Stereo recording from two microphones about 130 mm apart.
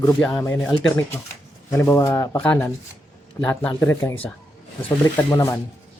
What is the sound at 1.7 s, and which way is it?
Speech, 20° left (ahead or behind).